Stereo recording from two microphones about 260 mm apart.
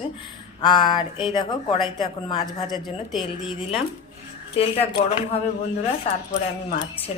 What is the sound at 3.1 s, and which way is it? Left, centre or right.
Speech, centre.